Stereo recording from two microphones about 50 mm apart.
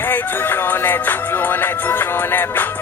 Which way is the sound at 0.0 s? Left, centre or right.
Left.